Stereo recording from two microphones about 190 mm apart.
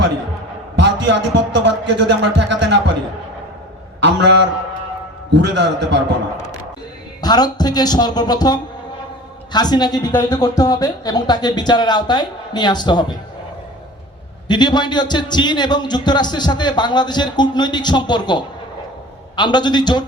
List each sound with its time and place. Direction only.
0.8 s a sound: 65° right (ahead or behind)
1.5 s a man's voice: 65° right (ahead or behind)
4.0 s a man's voice: 65° right (ahead or behind)
7.2 s a man's voice: 20° left (ahead or behind)
14.4 s a man's voice: 20° left (ahead or behind)